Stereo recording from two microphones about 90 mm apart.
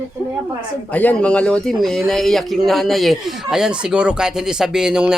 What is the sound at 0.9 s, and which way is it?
Speech, 15° left (ahead or behind).